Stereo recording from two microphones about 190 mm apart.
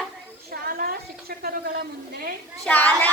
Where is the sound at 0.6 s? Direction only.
50° right (ahead or behind).